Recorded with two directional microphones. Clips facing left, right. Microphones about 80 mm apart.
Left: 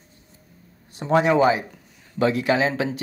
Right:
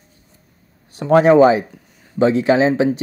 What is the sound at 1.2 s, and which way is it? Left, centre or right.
Speech, right.